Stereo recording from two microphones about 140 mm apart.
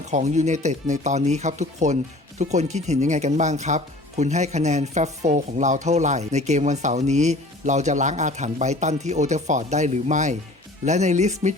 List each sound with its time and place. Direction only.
0.0 s speech: 55° right (ahead or behind)